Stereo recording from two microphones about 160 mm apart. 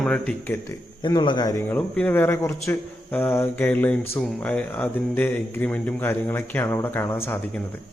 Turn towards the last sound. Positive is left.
turn(degrees=15)  # may be behind; listen again after turning